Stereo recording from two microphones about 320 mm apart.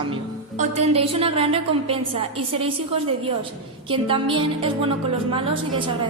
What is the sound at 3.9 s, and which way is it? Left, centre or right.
Speech, centre.